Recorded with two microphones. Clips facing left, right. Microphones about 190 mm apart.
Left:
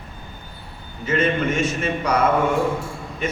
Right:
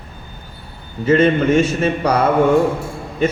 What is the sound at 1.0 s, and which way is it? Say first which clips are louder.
A man's voice: right 8 dB; 30° right (ahead or behind).